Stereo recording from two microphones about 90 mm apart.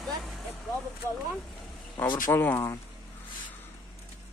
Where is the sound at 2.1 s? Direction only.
25° left (ahead or behind).